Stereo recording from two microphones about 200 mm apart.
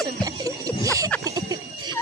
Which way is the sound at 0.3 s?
20° right (ahead or behind).